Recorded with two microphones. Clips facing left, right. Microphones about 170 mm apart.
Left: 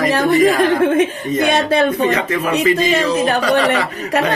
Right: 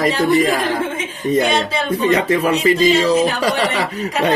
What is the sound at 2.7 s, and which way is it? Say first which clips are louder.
Speech: right 2 dB; 60° left (ahead or behind).